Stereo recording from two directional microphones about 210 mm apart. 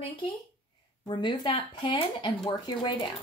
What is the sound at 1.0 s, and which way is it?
Speech, 20° left (ahead or behind).